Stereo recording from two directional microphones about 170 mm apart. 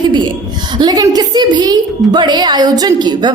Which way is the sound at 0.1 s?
25° right (ahead or behind).